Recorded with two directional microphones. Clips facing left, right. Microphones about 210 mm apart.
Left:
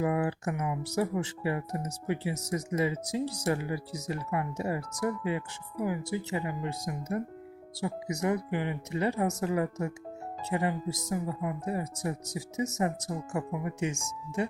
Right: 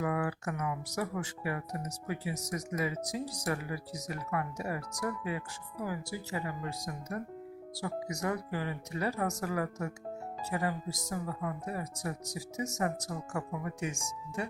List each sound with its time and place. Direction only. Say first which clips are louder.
0.0 s speech: left 4 dB; 25° left (ahead or behind)